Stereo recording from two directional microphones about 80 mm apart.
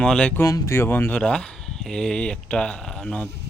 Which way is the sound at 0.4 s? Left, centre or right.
Left.